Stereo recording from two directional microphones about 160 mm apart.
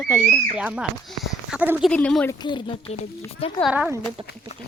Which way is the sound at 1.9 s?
5° left (ahead or behind).